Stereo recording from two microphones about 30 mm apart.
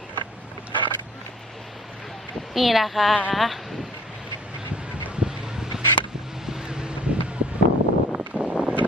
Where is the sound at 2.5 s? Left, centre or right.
Centre.